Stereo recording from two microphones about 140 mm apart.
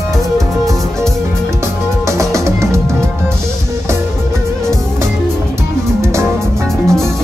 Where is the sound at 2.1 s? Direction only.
20° right (ahead or behind).